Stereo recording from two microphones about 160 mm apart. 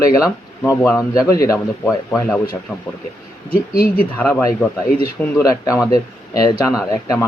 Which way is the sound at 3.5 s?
65° left (ahead or behind).